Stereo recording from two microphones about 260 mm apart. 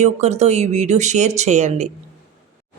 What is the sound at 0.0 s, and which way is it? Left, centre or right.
A woman's voice, right.